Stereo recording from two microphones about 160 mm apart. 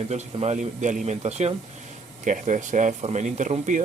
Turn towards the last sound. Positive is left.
turn(degrees=-50)  # may be behind; listen again after turning